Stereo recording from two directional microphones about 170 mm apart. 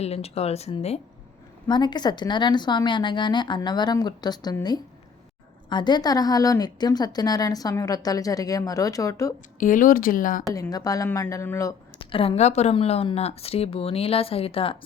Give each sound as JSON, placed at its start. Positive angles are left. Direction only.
{"t": 0.0, "sound": "a woman's voice", "side_deg": 35}
{"t": 1.6, "sound": "a woman's voice", "side_deg": 25}
{"t": 9.6, "sound": "speech", "side_deg": 50}
{"t": 10.5, "sound": "a woman's voice", "side_deg": 20}
{"t": 11.9, "sound": "a woman's voice", "side_deg": 30}